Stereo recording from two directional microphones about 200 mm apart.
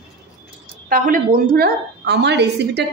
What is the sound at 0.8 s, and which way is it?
A woman's voice, 45° right (ahead or behind).